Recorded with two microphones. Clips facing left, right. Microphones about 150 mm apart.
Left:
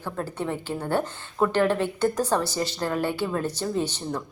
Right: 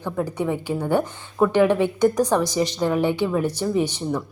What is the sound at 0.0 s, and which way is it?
A woman's voice, 15° right (ahead or behind).